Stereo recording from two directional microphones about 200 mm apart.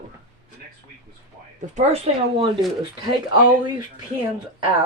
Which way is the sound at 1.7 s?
30° right (ahead or behind).